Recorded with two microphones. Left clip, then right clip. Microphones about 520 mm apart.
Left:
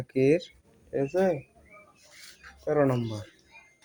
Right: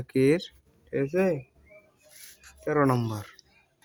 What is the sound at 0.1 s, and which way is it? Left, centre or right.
Speech, right.